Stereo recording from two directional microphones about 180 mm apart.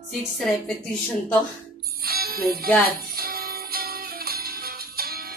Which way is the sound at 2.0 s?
55° right (ahead or behind).